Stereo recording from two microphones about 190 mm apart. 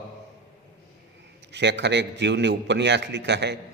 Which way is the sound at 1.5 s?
65° right (ahead or behind).